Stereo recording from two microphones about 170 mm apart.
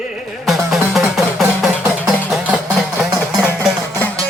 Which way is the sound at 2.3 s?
5° right (ahead or behind).